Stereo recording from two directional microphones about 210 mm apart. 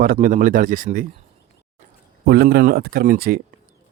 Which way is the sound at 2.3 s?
50° right (ahead or behind).